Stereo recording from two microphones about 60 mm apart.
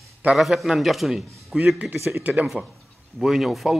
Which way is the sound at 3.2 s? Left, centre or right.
Centre.